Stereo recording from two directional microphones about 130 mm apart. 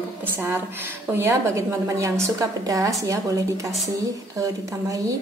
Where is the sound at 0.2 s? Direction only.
15° right (ahead or behind).